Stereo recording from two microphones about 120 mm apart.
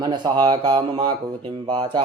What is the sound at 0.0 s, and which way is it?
Speech, 35° right (ahead or behind).